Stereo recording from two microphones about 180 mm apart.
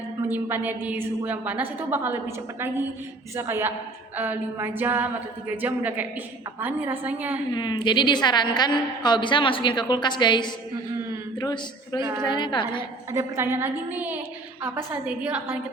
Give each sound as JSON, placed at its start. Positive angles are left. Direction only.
{"t": 0.3, "sound": "a woman's voice", "side_deg": -10}
{"t": 7.5, "sound": "a woman's voice", "side_deg": 25}
{"t": 13.1, "sound": "a woman's voice", "side_deg": -15}